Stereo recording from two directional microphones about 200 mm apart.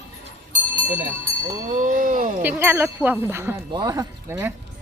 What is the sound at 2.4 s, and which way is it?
Speech, 10° right (ahead or behind).